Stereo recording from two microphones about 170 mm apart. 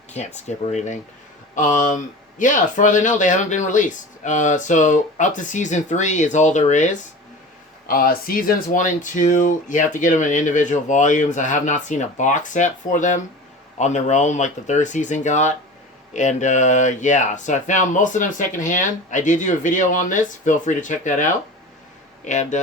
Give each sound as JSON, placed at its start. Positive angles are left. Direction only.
{"t": 0.1, "sound": "speech", "side_deg": 40}
{"t": 7.9, "sound": "speech", "side_deg": 60}